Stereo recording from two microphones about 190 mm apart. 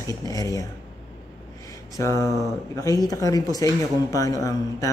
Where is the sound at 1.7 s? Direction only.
15° left (ahead or behind).